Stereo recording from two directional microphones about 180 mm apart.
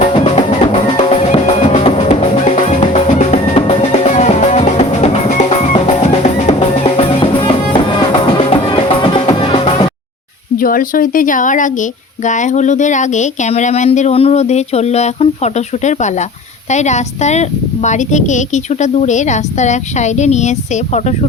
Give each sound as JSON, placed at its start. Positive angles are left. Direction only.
{"t": 0.9, "sound": "drum", "side_deg": 35}
{"t": 2.6, "sound": "music", "side_deg": 35}
{"t": 10.6, "sound": "speech", "side_deg": 50}